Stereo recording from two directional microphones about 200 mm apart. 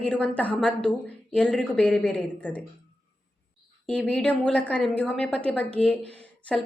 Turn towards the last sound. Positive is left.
turn(degrees=5)  # may be behind; listen again after turning